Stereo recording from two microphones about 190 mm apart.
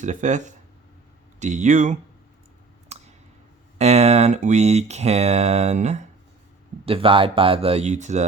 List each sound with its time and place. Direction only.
0.0 s speech: 40° right (ahead or behind)
2.9 s a sound: 35° right (ahead or behind)
3.8 s speech: 35° right (ahead or behind)